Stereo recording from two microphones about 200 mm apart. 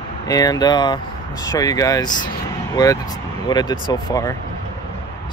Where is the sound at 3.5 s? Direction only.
20° left (ahead or behind).